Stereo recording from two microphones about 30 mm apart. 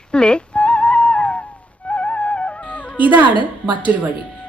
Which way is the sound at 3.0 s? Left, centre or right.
Right.